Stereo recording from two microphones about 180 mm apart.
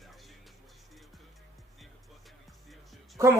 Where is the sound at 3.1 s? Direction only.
15° right (ahead or behind).